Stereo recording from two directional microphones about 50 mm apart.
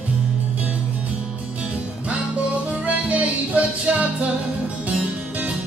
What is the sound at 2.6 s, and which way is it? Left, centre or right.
Music, right.